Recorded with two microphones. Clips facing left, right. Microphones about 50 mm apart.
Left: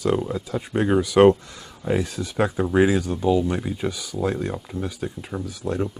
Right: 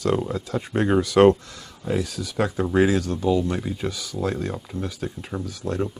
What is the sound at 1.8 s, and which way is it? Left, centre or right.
Speech, left.